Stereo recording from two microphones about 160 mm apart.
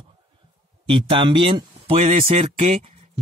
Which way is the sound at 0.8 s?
30° right (ahead or behind).